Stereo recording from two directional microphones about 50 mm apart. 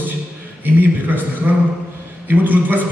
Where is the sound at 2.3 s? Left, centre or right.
Right.